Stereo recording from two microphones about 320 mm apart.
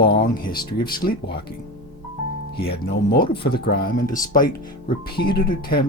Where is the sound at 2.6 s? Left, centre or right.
Left.